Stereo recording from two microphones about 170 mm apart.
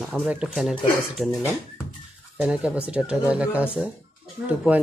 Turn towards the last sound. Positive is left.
turn(degrees=-5)  # may be behind; listen again after turning